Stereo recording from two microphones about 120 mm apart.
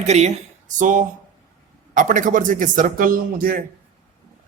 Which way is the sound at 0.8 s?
90° right.